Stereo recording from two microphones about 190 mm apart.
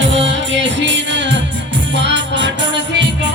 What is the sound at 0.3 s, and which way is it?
Music, 70° right (ahead or behind).